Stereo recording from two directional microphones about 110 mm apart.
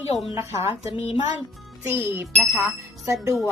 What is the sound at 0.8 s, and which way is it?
Speech, 65° left (ahead or behind).